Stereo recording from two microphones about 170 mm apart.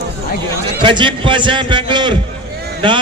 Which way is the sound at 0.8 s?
30° right (ahead or behind).